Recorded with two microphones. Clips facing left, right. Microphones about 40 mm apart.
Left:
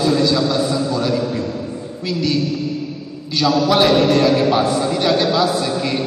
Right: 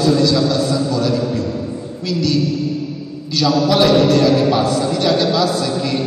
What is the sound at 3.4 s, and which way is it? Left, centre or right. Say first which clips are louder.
A man's voice: even; centre.